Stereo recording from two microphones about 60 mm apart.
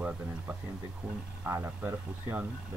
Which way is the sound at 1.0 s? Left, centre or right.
Centre.